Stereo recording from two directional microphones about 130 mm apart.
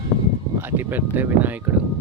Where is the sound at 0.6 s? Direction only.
15° right (ahead or behind).